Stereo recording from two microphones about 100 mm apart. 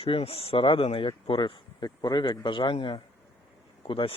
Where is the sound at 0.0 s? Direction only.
70° left (ahead or behind).